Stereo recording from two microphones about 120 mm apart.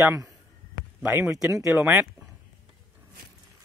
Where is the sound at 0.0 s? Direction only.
25° right (ahead or behind).